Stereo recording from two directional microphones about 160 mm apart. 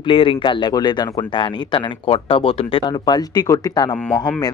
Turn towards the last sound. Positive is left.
turn(degrees=5)  # may be behind; listen again after turning